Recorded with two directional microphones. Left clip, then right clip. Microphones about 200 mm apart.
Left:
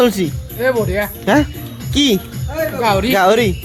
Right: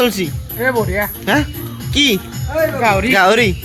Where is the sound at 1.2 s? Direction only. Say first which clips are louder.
Left 4 dB; 30° left (ahead or behind).